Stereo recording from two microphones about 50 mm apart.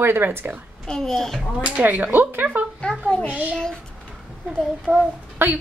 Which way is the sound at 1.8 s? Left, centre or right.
Right.